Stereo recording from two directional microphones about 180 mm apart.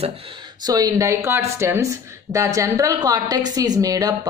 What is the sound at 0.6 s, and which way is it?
A woman's voice, 20° right (ahead or behind).